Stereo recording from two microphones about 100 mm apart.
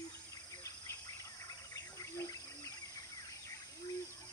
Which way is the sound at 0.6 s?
35° left (ahead or behind).